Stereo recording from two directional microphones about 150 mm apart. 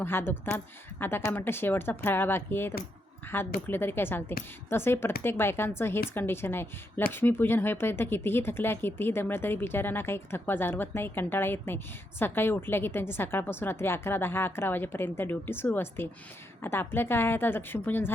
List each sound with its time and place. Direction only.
0.0 s speech: 15° left (ahead or behind)